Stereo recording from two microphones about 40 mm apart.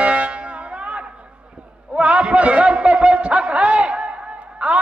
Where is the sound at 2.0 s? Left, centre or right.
Right.